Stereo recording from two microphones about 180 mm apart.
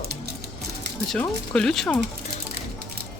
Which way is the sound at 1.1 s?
5° left (ahead or behind).